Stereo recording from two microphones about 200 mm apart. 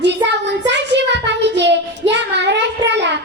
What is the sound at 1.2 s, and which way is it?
Child singing, 60° right (ahead or behind).